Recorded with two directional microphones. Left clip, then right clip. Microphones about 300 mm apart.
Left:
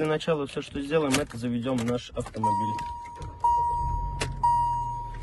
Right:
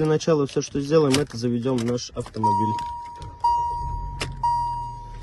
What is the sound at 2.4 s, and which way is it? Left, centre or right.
Speech, centre.